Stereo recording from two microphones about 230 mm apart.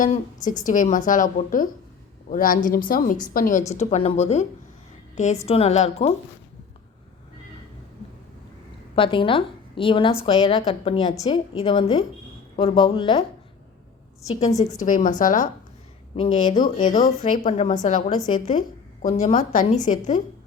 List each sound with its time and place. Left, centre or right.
0.0 s a woman's voice: left
9.0 s a woman's voice: left
14.3 s speech: left
16.1 s a woman's voice: left